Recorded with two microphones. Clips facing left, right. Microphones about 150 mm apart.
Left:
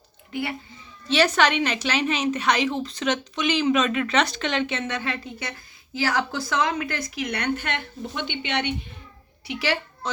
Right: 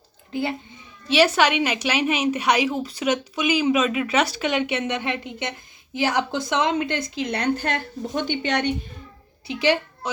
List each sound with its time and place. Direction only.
1.0 s a woman's voice: 10° right (ahead or behind); by 8.7 s 40° right (ahead or behind)
9.5 s a woman's voice: 20° right (ahead or behind)